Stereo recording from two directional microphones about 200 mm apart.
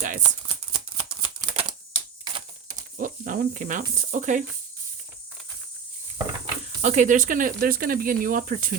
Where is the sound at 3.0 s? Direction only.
40° right (ahead or behind).